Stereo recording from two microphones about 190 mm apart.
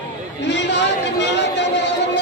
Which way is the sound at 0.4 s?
65° left (ahead or behind).